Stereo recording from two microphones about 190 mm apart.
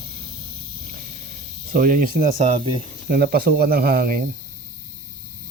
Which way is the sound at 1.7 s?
45° right (ahead or behind).